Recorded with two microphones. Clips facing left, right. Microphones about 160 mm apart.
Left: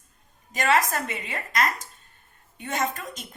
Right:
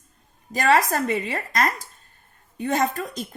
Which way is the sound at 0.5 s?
35° right (ahead or behind).